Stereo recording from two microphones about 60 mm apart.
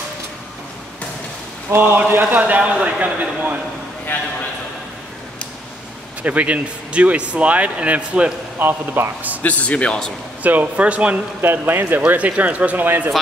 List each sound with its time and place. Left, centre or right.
1.7 s a man's voice: right
4.1 s a man's voice: left
6.2 s speech: right
8.5 s a man's voice: right
9.4 s speech: left
10.4 s speech: right
11.4 s a man's voice: right